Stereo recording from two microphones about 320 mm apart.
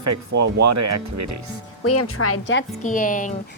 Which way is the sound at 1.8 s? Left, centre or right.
Left.